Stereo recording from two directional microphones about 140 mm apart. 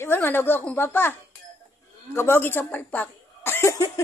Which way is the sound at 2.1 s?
15° left (ahead or behind).